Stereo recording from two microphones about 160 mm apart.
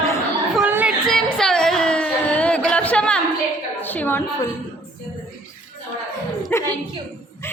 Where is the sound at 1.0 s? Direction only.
5° left (ahead or behind).